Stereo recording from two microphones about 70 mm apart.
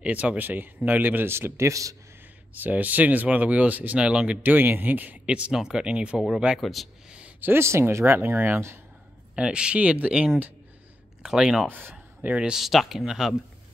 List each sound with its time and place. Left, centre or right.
0.0 s speech: centre; by 1.7 s right
1.7 s speech: right
2.5 s speech: right
4.5 s speech: right
6.6 s speech: centre
7.3 s speech: right
9.3 s speech: centre
11.2 s speech: centre
11.6 s a man's voice: right
12.5 s speech: centre